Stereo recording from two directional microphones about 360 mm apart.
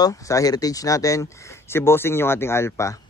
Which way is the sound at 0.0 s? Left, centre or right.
Centre.